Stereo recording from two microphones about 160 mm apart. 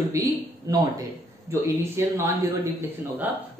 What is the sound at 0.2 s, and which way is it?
A man's voice, 20° right (ahead or behind).